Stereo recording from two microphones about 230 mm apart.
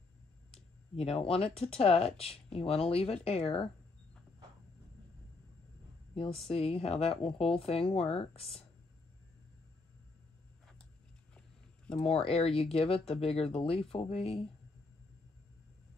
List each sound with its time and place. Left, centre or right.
0.9 s speech: left
6.1 s speech: left
11.3 s a sound: centre
12.0 s speech: left